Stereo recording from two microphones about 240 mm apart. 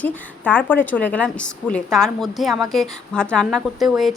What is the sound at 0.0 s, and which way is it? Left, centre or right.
A woman's voice, centre.